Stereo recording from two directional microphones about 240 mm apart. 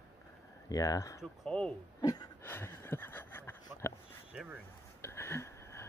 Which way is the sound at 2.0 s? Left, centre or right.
Centre.